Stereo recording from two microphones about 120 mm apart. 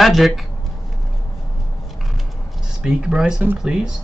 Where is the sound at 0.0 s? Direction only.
Centre (ahead or behind).